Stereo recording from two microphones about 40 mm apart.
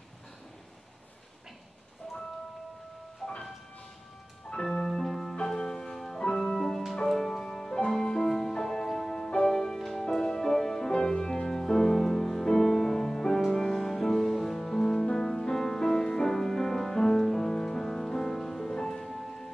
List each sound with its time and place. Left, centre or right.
3.2 s music: centre
4.6 s music: centre
9.8 s music: centre
10.0 s music: centre